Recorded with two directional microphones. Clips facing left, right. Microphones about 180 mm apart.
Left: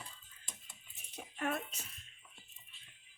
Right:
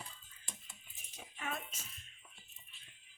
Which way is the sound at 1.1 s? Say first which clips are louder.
Left 6 dB; 60° left (ahead or behind).